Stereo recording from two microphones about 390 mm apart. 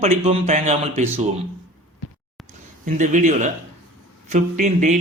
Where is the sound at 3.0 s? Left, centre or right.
Centre.